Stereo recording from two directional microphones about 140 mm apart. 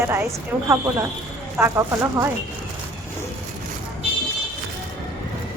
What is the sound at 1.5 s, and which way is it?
Speech, 15° right (ahead or behind).